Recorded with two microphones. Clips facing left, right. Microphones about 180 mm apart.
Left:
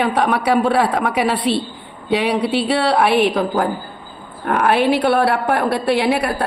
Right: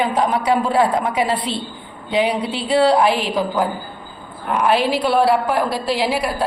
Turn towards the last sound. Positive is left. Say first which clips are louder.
# left 3 dB
turn(degrees=60)  # may be behind; listen again after turning